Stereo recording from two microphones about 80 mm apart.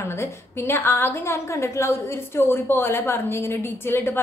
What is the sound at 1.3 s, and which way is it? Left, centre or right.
A woman's voice, left.